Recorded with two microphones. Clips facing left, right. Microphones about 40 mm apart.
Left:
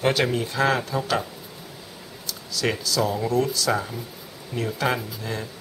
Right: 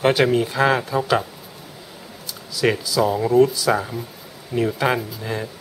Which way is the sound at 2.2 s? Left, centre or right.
Centre.